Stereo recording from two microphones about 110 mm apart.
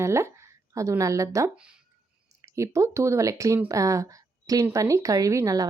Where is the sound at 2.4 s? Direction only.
25° right (ahead or behind).